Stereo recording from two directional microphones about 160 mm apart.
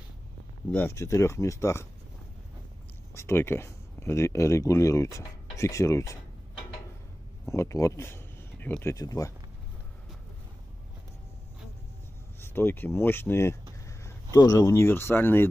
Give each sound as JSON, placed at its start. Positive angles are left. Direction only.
{"t": 0.7, "sound": "speech", "side_deg": 10}
{"t": 3.2, "sound": "speech", "side_deg": 15}
{"t": 7.4, "sound": "speech", "side_deg": 20}
{"t": 12.4, "sound": "speech", "side_deg": 15}